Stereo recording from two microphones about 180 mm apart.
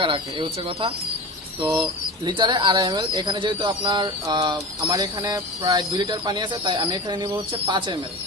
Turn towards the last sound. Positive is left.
turn(degrees=-25)  # may be behind; listen again after turning